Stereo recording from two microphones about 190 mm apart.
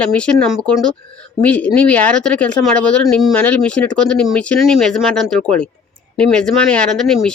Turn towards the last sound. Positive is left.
turn(degrees=0)  # may be behind; listen again after turning